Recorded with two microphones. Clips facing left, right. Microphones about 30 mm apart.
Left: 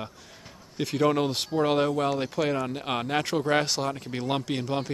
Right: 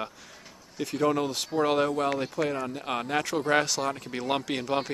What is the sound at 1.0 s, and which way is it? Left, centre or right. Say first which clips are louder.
Speech: left 2 dB; left.